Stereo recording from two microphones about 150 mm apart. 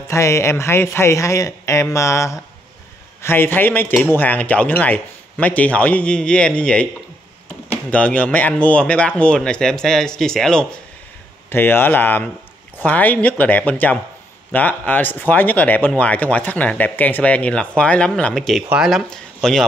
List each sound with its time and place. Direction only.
0.1 s speech: 20° left (ahead or behind)
7.9 s speech: 10° left (ahead or behind)
11.5 s speech: 15° left (ahead or behind)